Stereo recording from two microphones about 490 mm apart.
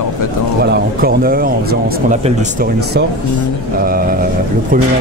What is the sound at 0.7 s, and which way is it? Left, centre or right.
Speech, centre.